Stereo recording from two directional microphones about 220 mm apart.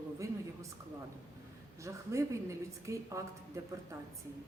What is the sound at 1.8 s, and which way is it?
A woman's voice, 15° right (ahead or behind).